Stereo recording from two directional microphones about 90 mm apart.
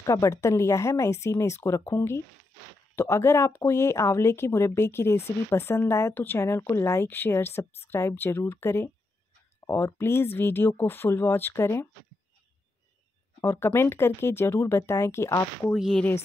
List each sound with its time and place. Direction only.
0.0 s speech: 40° left (ahead or behind)
13.4 s speech: 35° left (ahead or behind)
15.7 s speech: 5° left (ahead or behind)